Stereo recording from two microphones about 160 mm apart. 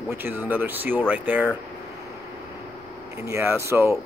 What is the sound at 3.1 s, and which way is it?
Speech, 15° right (ahead or behind).